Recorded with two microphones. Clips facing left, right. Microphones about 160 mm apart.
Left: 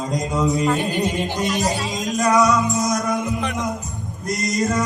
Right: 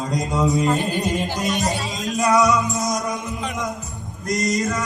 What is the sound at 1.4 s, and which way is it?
Speech, centre (ahead or behind).